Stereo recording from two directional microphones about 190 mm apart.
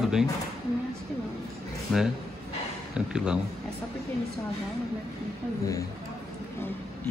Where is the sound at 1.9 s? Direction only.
5° left (ahead or behind).